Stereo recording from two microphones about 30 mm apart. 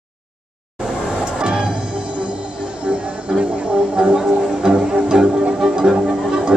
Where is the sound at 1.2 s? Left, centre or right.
Right.